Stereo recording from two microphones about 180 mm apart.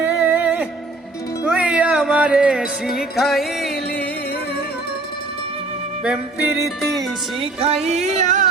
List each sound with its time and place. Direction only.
0.2 s music: 10° right (ahead or behind)
6.0 s music: 5° right (ahead or behind)
7.4 s music: 35° right (ahead or behind)